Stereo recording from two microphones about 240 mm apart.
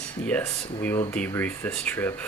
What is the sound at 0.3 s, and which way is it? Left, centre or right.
Speech, centre.